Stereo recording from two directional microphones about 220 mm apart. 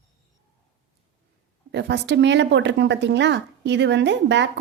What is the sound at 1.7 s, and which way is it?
A woman's voice, 50° right (ahead or behind).